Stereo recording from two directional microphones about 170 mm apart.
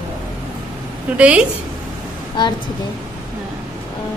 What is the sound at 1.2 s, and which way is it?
Speech, 5° right (ahead or behind).